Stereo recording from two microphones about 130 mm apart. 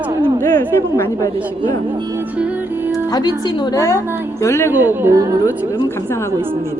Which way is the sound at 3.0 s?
30° left (ahead or behind).